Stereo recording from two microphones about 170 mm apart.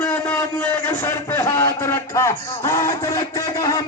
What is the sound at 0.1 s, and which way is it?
A man's voice, 10° left (ahead or behind).